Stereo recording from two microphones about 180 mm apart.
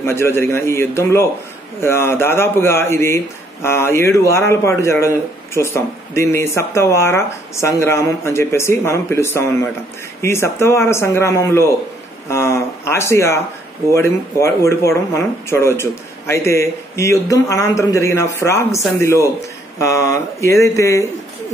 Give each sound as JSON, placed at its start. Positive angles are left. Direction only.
{"t": 0.0, "sound": "a man's voice", "side_deg": 15}